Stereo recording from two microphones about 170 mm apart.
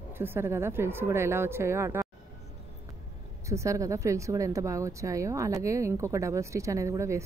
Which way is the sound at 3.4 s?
15° right (ahead or behind).